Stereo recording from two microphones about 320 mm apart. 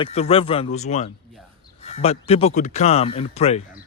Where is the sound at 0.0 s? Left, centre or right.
Centre.